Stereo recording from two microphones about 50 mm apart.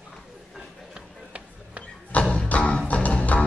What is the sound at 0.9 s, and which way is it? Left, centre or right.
Music, right.